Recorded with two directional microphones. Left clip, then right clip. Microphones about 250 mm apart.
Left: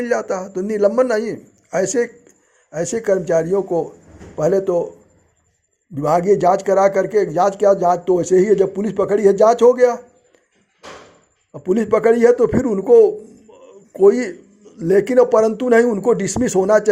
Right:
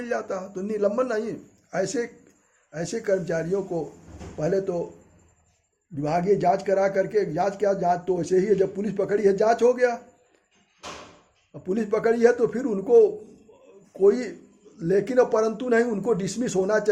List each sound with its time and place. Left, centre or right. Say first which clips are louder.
0.0 s a man's voice: left 9 dB; left
5.9 s a man's voice: left 8 dB; left
11.5 s a man's voice: left 9 dB; left